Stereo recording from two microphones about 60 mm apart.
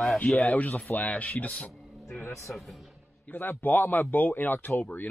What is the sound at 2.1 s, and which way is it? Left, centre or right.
Speech, left.